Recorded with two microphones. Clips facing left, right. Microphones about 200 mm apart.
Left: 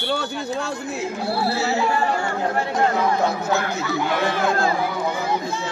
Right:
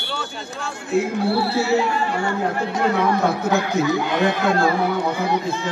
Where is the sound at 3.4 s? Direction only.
15° right (ahead or behind).